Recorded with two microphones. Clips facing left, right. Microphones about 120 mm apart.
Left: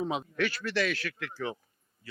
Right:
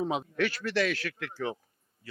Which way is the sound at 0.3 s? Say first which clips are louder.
Right 2 dB; 55° right (ahead or behind).